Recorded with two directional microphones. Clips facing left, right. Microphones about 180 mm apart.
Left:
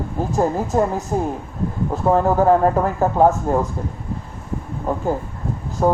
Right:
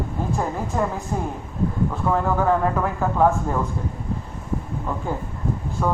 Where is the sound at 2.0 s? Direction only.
35° left (ahead or behind).